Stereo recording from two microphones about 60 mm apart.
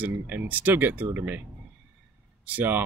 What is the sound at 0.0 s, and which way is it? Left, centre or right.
Speech, right.